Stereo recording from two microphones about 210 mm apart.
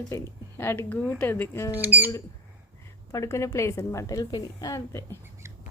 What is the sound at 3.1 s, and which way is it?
A woman's voice, 15° left (ahead or behind).